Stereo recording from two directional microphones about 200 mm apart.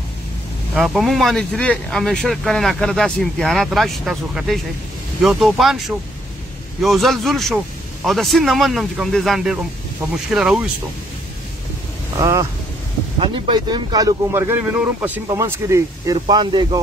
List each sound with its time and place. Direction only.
0.7 s speech: centre (ahead or behind)
12.2 s speech: 15° right (ahead or behind)